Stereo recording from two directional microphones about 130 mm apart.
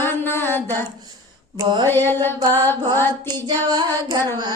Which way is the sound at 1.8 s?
15° left (ahead or behind).